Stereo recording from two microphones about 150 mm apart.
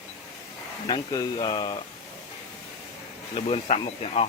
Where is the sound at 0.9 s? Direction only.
25° left (ahead or behind).